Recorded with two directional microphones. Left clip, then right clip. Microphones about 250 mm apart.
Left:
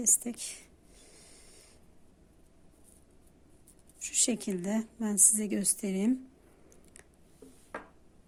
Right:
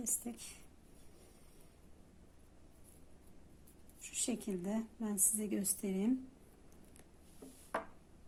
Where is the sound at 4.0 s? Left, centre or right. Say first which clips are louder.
Left 10 dB; left.